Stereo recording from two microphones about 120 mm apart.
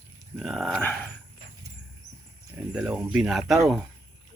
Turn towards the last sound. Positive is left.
turn(degrees=0)  # may be behind; listen again after turning